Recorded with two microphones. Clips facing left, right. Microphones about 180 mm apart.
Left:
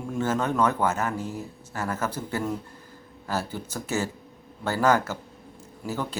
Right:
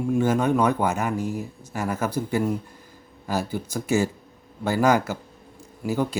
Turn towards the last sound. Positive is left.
turn(degrees=-10)  # may be behind; listen again after turning